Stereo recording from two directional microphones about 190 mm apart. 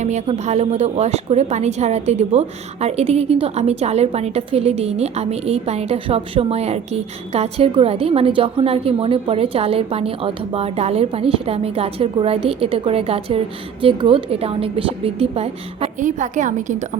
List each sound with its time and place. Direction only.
0.0 s a woman's voice: 35° right (ahead or behind)